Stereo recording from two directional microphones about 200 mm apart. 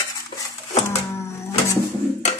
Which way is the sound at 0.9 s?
15° left (ahead or behind).